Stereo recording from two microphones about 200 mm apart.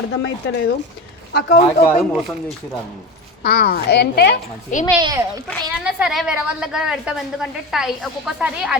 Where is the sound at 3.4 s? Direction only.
55° left (ahead or behind).